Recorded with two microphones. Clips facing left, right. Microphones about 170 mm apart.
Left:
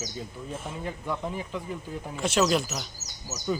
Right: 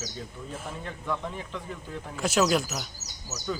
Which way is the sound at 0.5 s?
10° left (ahead or behind).